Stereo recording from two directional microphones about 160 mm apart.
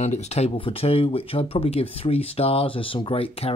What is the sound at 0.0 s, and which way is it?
Speech, 45° left (ahead or behind).